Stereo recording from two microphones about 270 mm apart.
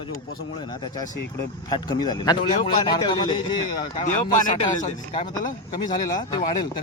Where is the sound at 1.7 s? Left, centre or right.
Centre.